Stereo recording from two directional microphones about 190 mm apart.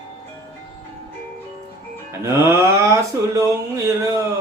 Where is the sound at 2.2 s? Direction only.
15° right (ahead or behind).